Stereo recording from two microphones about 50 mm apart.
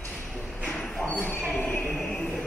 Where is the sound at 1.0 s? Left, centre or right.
Left.